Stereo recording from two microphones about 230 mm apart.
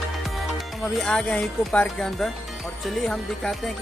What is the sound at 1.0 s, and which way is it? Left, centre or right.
Speech, centre.